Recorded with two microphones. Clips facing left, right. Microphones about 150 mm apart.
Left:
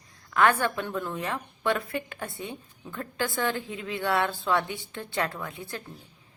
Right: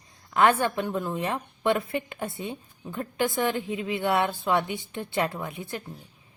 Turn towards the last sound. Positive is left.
turn(degrees=-20)  # may be behind; listen again after turning